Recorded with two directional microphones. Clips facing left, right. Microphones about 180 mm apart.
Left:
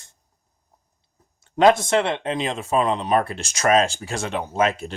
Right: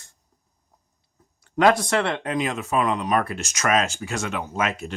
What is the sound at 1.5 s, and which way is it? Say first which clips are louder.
Speech: left 3 dB; 25° left (ahead or behind).